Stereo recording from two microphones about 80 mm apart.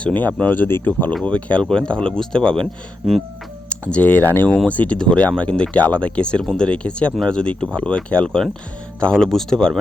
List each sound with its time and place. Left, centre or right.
0.0 s speech: left
3.7 s speech: centre